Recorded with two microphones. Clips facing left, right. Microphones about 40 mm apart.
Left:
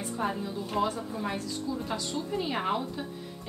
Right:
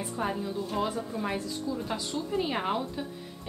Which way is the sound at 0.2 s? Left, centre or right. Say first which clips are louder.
Right 1 dB; centre.